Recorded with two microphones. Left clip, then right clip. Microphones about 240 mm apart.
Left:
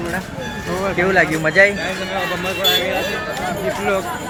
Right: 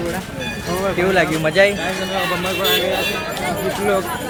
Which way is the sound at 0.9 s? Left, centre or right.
Centre.